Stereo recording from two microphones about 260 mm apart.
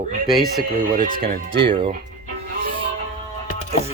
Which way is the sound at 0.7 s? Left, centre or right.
Right.